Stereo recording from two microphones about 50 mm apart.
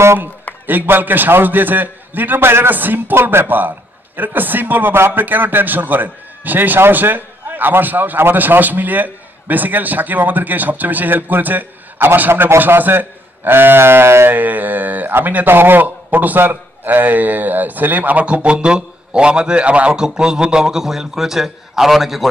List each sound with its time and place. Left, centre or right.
0.7 s a man's voice: right
2.7 s a man's voice: right
3.2 s a man's voice: right
5.2 s a man's voice: right
12.3 s a man's voice: right
14.3 s a man's voice: right
18.2 s a man's voice: right
20.0 s a man's voice: centre